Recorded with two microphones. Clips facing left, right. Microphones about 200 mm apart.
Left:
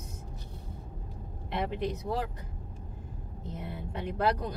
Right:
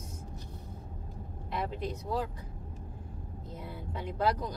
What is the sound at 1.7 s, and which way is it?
Speech, 65° left (ahead or behind).